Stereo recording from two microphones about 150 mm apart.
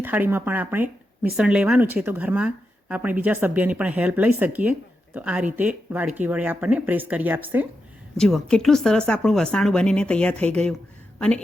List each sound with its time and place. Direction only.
0.0 s speech: 15° right (ahead or behind)
8.2 s a woman's voice: 5° left (ahead or behind)